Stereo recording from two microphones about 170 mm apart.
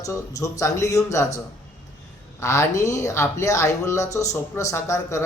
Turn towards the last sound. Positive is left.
turn(degrees=15)  # may be behind; listen again after turning